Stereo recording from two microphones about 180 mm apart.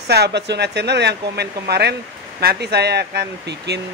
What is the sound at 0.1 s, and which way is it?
Speech, 70° right (ahead or behind).